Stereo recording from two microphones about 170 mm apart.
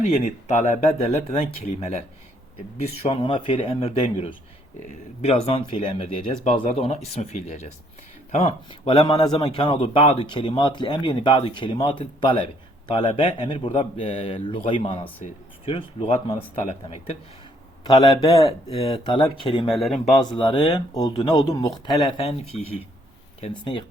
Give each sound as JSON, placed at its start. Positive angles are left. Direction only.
{"t": 0.0, "sound": "a man's voice", "side_deg": 45}
{"t": 17.8, "sound": "a man's voice", "side_deg": 25}
{"t": 18.4, "sound": "speech", "side_deg": 35}
{"t": 19.7, "sound": "speech", "side_deg": 0}
{"t": 20.1, "sound": "a man's voice", "side_deg": 25}